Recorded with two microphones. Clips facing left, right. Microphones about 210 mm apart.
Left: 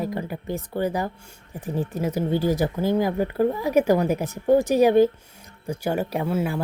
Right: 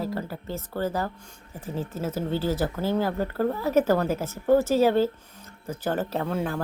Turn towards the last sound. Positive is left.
turn(degrees=10)  # may be behind; listen again after turning